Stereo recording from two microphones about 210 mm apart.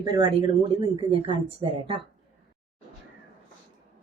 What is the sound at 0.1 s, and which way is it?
A woman's voice, 25° right (ahead or behind).